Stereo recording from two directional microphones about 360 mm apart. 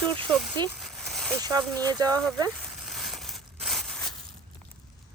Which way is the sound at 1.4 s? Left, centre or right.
Centre.